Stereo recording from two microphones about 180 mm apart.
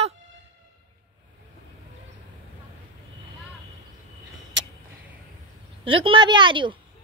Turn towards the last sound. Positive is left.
turn(degrees=-25)  # may be behind; listen again after turning